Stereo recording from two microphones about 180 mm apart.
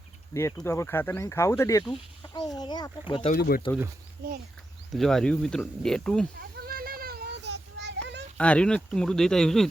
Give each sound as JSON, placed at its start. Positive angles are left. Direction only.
{"t": 0.5, "sound": "speech", "side_deg": 15}
{"t": 3.3, "sound": "speech", "side_deg": 55}
{"t": 4.9, "sound": "speech", "side_deg": 0}
{"t": 6.4, "sound": "child singing", "side_deg": -55}
{"t": 8.4, "sound": "speech", "side_deg": 5}